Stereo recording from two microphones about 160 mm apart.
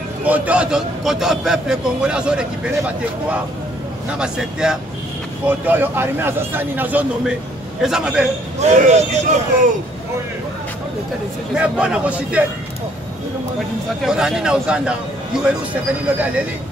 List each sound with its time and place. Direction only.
0.2 s a man's voice: 10° right (ahead or behind)
4.1 s a man's voice: 5° right (ahead or behind)
8.5 s a man's voice: 45° right (ahead or behind)
11.5 s a man's voice: 5° right (ahead or behind)
14.0 s a man's voice: 5° right (ahead or behind)